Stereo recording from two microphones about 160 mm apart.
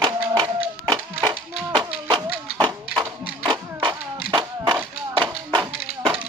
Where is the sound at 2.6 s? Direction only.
30° right (ahead or behind).